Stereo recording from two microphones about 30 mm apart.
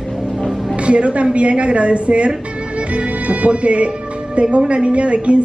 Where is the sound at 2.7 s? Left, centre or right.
Right.